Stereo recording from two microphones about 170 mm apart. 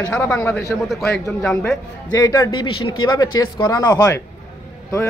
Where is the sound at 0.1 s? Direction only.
10° left (ahead or behind).